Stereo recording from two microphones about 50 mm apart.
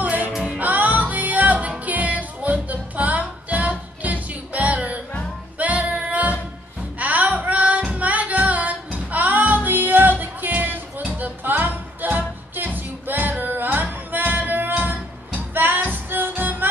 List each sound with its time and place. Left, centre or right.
0.0 s music: right
0.3 s music: centre
0.6 s music: right
7.0 s singing: right
11.0 s music: right